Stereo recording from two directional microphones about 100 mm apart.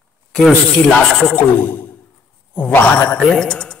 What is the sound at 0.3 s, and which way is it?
Speech, 5° left (ahead or behind).